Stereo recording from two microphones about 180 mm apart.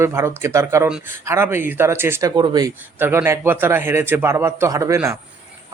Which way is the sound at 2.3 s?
25° right (ahead or behind).